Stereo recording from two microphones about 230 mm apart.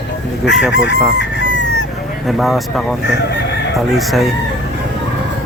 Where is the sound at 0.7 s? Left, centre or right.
Left.